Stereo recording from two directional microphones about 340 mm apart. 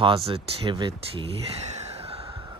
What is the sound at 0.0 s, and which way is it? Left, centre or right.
Speech, centre.